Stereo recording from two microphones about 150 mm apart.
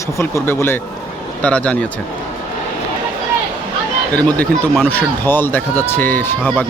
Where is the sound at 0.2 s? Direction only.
15° left (ahead or behind).